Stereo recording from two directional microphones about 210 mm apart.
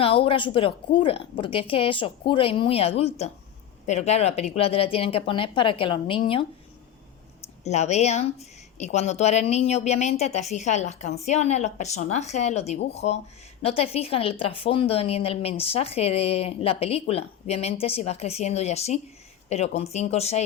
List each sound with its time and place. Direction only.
0.0 s speech: 25° left (ahead or behind)
7.6 s a woman's voice: 30° left (ahead or behind)